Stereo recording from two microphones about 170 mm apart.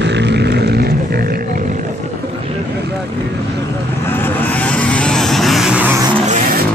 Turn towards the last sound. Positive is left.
turn(degrees=-5)  # may be behind; listen again after turning